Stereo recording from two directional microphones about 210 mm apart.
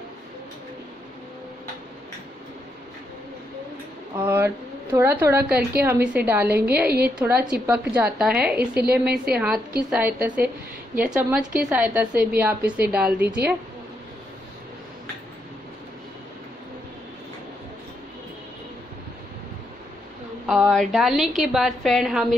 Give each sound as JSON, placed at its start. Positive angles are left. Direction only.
{"t": 4.2, "sound": "a woman's voice", "side_deg": -10}
{"t": 8.8, "sound": "a woman's voice", "side_deg": -50}
{"t": 9.8, "sound": "a woman's voice", "side_deg": -5}
{"t": 20.4, "sound": "a woman's voice", "side_deg": 0}